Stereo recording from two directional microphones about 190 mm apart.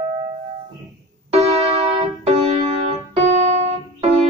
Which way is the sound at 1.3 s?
30° right (ahead or behind).